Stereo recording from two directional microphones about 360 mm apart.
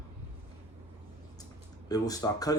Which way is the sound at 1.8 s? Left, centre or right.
Centre.